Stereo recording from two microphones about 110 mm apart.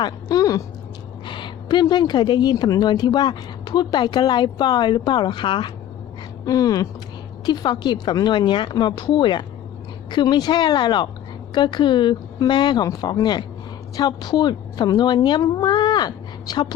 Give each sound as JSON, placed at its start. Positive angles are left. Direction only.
{"t": 0.0, "sound": "speech", "side_deg": 35}
{"t": 1.3, "sound": "a woman's voice", "side_deg": 45}
{"t": 6.4, "sound": "a woman's voice", "side_deg": 35}